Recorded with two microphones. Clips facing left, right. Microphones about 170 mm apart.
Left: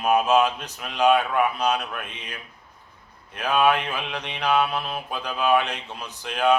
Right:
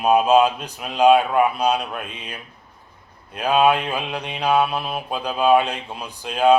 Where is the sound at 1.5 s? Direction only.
10° right (ahead or behind).